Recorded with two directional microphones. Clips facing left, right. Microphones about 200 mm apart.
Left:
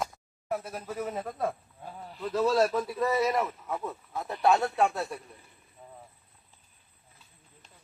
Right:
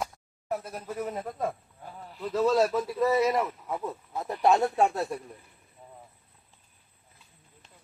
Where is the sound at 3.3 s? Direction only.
10° right (ahead or behind).